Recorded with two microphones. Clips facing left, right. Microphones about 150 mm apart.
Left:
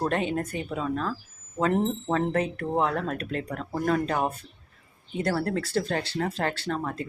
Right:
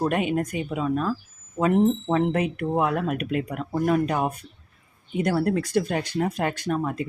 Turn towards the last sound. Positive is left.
turn(degrees=-15)  # may be behind; listen again after turning